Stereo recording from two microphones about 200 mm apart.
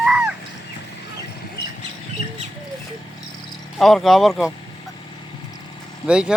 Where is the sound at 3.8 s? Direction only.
Centre (ahead or behind).